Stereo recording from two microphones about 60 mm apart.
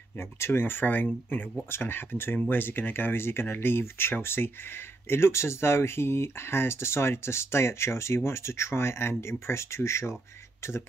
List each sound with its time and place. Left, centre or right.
0.2 s speech: left